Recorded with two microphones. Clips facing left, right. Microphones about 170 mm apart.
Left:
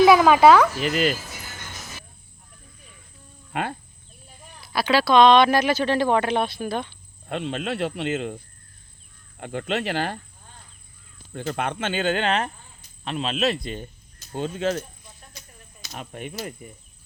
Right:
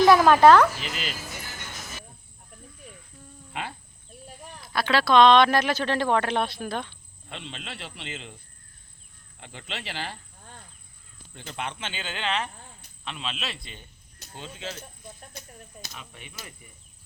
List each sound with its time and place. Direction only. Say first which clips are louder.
0.0 s speech: left 2 dB; 5° left (ahead or behind)
0.8 s speech: left 12 dB; 50° left (ahead or behind)
3.5 s speech: left 7 dB; 55° left (ahead or behind)
4.7 s speech: left 2 dB; 5° left (ahead or behind)
7.3 s speech: left 12 dB; 50° left (ahead or behind)
9.4 s speech: left 12 dB; 50° left (ahead or behind)
11.3 s speech: left 8 dB; 50° left (ahead or behind)
15.0 s a sound: right 5 dB; 55° right (ahead or behind)
15.9 s speech: left 11 dB; 50° left (ahead or behind)